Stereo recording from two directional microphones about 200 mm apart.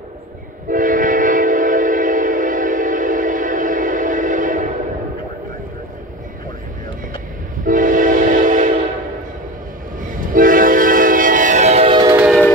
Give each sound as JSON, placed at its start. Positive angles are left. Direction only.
{"t": 0.7, "sound": "train", "side_deg": -40}
{"t": 7.6, "sound": "train", "side_deg": -40}
{"t": 10.3, "sound": "train", "side_deg": -45}